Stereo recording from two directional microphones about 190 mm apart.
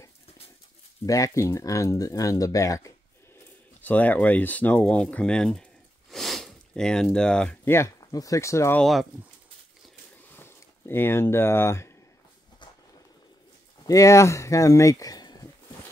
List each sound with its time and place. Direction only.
1.0 s speech: 15° left (ahead or behind)
10.3 s speech: 10° left (ahead or behind)
13.8 s speech: 15° left (ahead or behind)